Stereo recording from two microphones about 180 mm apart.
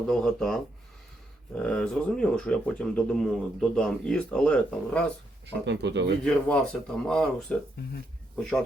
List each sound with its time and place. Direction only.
0.1 s speech: 5° left (ahead or behind)
5.6 s speech: 70° right (ahead or behind)
6.2 s speech: 5° left (ahead or behind)